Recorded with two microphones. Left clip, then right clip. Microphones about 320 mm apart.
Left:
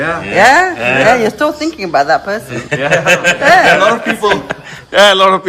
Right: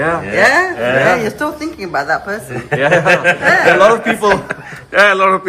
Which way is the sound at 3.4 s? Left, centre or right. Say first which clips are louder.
Left 8 dB; left.